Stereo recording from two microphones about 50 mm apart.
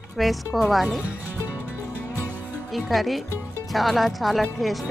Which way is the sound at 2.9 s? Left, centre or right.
Centre.